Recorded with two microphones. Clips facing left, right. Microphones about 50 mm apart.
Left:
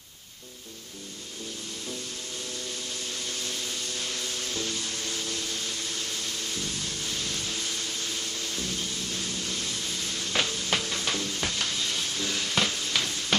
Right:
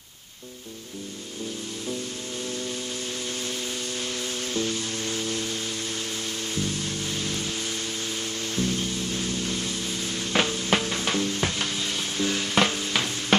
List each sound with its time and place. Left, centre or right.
5.0 s steam: right
8.5 s music: right
10.1 s stir: right
11.5 s stir: right